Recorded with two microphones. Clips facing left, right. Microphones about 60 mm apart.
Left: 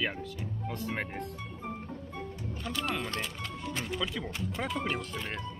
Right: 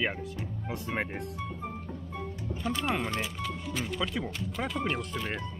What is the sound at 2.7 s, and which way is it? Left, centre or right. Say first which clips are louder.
Speech: right 3 dB; right.